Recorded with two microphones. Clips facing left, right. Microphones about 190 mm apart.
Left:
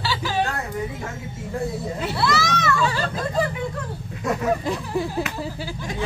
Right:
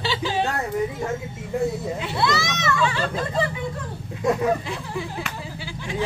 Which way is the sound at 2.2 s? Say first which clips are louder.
Left 1 dB; 20° right (ahead or behind).